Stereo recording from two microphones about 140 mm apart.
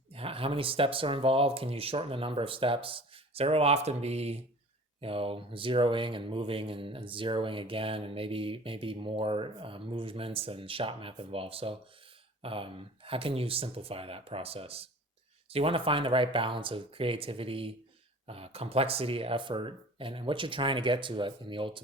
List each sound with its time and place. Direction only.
0.1 s speech: 40° right (ahead or behind)